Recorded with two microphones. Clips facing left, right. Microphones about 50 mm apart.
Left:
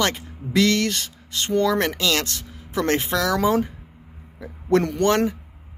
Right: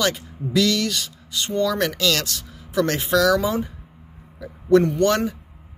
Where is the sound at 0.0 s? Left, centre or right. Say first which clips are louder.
Even; left.